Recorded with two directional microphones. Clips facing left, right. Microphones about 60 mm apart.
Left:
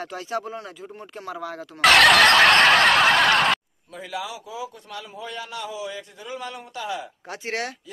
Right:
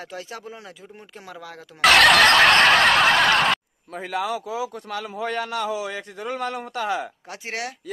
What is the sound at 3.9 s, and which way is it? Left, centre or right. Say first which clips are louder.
A man's voice: right 6 dB; right.